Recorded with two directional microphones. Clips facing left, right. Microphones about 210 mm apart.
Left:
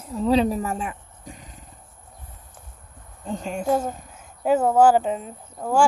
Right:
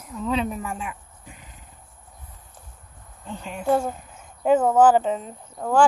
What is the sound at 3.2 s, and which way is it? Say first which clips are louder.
Speech: left 6 dB; 45° left (ahead or behind).